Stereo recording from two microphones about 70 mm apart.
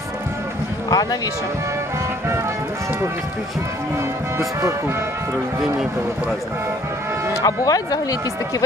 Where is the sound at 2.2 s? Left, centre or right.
Right.